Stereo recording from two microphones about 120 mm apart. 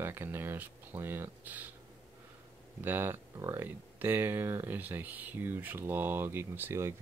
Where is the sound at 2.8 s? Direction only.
20° right (ahead or behind).